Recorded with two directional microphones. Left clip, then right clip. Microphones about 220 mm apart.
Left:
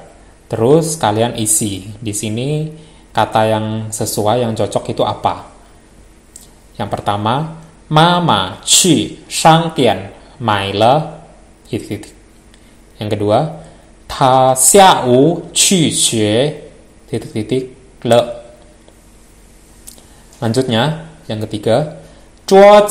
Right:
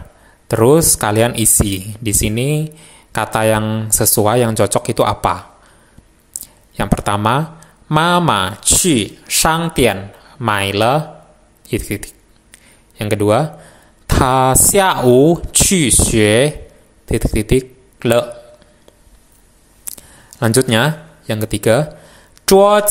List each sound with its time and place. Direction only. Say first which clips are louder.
0.5 s speech: right 1 dB; 45° right (ahead or behind)
6.4 s speech: right 2 dB; 40° right (ahead or behind)
19.8 s a sound: right 5 dB; 40° right (ahead or behind)
22.4 s speech: left 4 dB; 45° right (ahead or behind)